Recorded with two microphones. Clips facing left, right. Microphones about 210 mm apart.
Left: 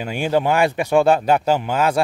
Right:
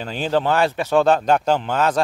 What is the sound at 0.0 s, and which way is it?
A man's voice, 10° left (ahead or behind).